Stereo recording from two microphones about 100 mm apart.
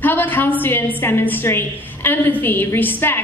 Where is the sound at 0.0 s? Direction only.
20° left (ahead or behind).